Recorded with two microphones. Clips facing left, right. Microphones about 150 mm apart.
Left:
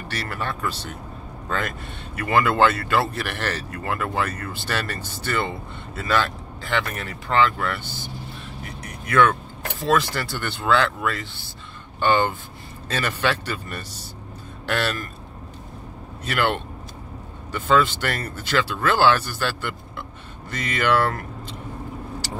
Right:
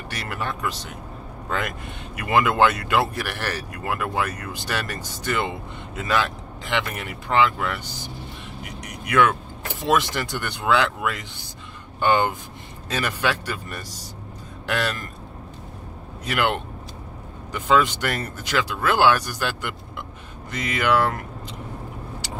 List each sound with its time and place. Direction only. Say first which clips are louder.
0.1 s speech: left 1 dB; 15° right (ahead or behind)
2.1 s speech: even; 15° right (ahead or behind)
16.3 s speech: even; 10° right (ahead or behind)